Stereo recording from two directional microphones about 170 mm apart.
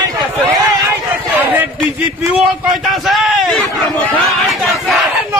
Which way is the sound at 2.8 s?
Centre (ahead or behind).